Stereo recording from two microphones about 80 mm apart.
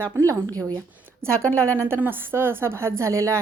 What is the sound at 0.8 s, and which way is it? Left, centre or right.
Speech, right.